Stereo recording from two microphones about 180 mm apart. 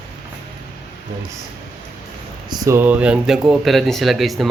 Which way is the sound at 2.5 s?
15° right (ahead or behind).